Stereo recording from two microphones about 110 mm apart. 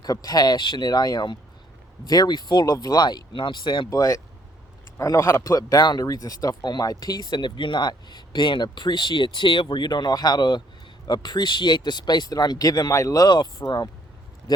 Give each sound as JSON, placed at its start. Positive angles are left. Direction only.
{"t": 0.0, "sound": "speech", "side_deg": 35}
{"t": 3.8, "sound": "a man's voice", "side_deg": 35}